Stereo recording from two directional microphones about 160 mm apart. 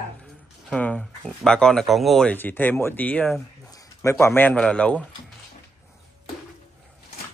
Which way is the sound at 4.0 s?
15° left (ahead or behind).